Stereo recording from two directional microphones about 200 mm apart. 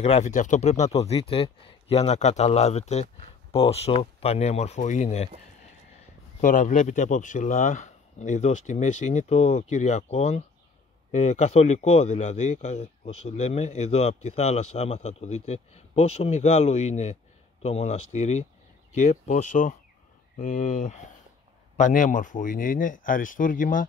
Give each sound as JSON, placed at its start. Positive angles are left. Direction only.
{"t": 0.0, "sound": "speech", "side_deg": 35}
{"t": 6.4, "sound": "speech", "side_deg": 40}